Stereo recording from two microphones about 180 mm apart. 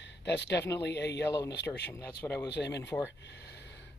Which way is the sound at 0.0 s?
75° left (ahead or behind).